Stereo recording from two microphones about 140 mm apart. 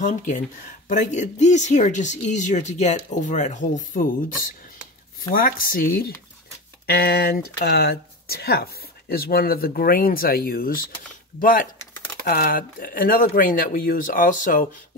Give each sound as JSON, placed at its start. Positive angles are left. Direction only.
{"t": 0.0, "sound": "speech", "side_deg": 60}
{"t": 12.3, "sound": "speech", "side_deg": 85}